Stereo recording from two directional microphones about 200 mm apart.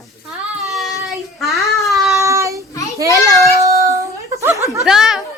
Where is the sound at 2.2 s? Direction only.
15° right (ahead or behind).